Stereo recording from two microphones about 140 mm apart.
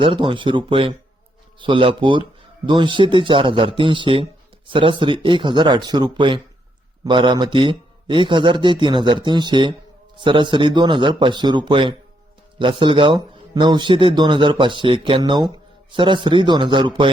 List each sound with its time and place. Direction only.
0.0 s speech: 35° right (ahead or behind)